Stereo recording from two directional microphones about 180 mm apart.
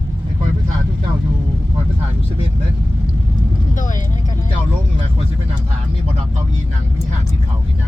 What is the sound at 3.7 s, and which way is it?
Vehicle, 45° left (ahead or behind).